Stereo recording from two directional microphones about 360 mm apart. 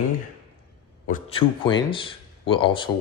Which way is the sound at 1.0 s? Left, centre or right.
Centre.